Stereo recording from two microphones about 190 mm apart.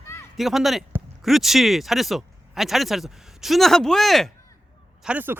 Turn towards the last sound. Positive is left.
turn(degrees=-10)  # may be behind; listen again after turning